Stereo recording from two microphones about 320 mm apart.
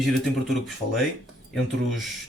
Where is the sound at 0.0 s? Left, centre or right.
Centre.